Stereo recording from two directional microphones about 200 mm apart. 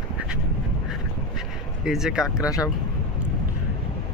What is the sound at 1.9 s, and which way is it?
Speech, 5° right (ahead or behind).